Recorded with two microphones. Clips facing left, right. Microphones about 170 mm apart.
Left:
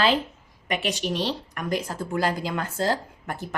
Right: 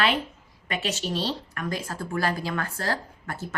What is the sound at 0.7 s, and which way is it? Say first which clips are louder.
A woman's voice: left 2 dB; 15° left (ahead or behind).